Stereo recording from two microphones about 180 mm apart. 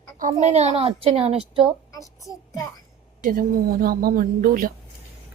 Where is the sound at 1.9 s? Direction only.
20° left (ahead or behind).